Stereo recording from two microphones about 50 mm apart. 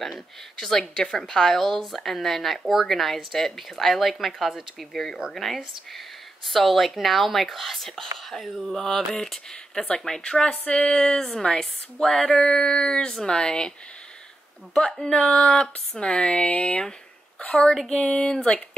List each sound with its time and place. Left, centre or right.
0.6 s speech: centre
14.8 s speech: centre
16.3 s speech: left
17.8 s speech: centre